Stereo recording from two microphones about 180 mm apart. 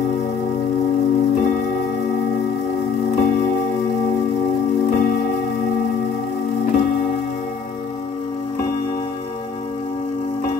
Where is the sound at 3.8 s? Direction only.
55° left (ahead or behind).